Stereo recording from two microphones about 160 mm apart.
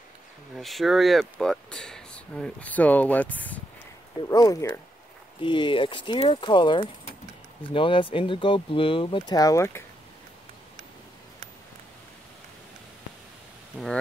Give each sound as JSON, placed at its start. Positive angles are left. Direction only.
{"t": 0.6, "sound": "speech", "side_deg": 0}
{"t": 4.2, "sound": "speech", "side_deg": 20}
{"t": 5.4, "sound": "speech", "side_deg": 30}
{"t": 13.7, "sound": "a sound", "side_deg": -10}